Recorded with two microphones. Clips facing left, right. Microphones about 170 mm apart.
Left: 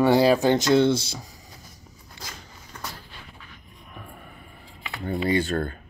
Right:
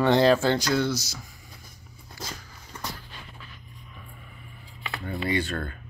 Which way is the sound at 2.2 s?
25° left (ahead or behind).